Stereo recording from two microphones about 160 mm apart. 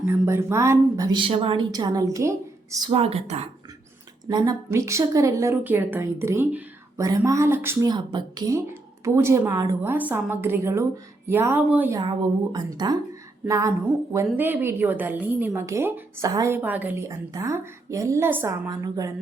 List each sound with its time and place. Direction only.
0.0 s speech: 15° right (ahead or behind)
2.9 s a woman's voice: 40° right (ahead or behind)
4.3 s a woman's voice: 25° right (ahead or behind)
11.9 s a woman's voice: 25° right (ahead or behind)